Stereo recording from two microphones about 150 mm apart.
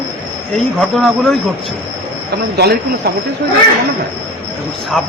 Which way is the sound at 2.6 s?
90° right.